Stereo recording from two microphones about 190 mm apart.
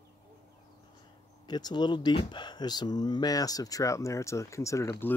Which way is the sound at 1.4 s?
20° left (ahead or behind).